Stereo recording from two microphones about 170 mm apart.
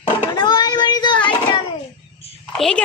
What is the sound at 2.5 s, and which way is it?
Speech, 5° left (ahead or behind).